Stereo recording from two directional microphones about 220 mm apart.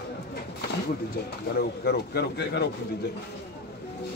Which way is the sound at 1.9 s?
50° left (ahead or behind).